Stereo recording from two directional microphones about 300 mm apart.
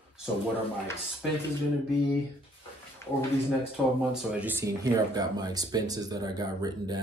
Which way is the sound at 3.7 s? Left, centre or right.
Centre.